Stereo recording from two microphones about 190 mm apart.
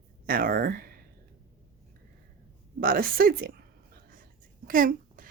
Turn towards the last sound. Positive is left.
turn(degrees=-45)  # may be behind; listen again after turning